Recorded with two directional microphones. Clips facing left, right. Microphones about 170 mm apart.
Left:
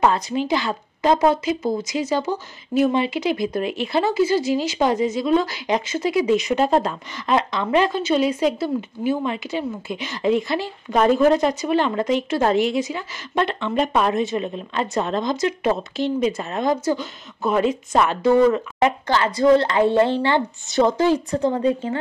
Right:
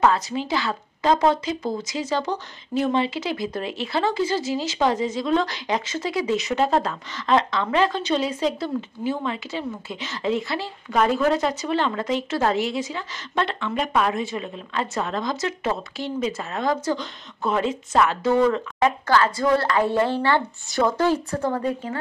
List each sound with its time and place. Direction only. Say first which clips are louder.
0.0 s speech: left 1 dB; 15° left (ahead or behind)